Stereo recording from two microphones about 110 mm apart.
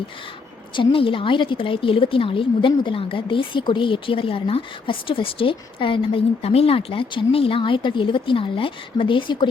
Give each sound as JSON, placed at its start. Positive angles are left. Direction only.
{"t": 0.8, "sound": "a woman's voice", "side_deg": 50}